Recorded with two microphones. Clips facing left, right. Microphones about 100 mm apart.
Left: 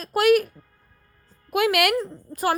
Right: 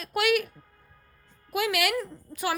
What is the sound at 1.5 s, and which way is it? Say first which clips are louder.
Speech: left 6 dB; 55° left (ahead or behind).